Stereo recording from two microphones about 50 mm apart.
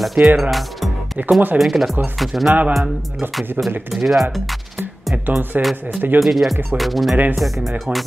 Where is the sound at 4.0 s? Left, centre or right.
Centre.